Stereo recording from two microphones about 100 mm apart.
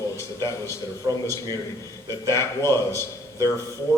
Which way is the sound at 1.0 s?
35° right (ahead or behind).